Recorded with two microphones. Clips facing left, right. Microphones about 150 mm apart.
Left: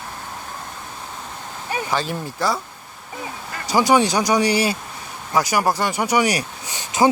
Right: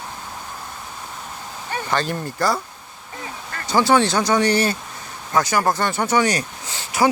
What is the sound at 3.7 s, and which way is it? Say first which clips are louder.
Speech: even; 10° left (ahead or behind).